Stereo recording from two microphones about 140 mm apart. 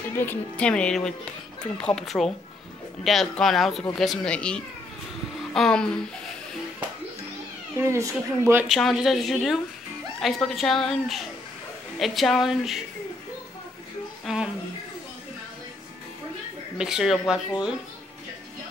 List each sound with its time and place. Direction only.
0.2 s a woman's voice: 10° left (ahead or behind)
7.7 s speech: 20° right (ahead or behind)
8.6 s a woman's voice: centre (ahead or behind)
14.2 s speech: 5° right (ahead or behind)
16.7 s a woman's voice: 5° right (ahead or behind)